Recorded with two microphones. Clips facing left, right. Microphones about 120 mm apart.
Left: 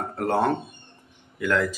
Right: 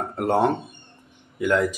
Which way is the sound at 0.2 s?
20° right (ahead or behind).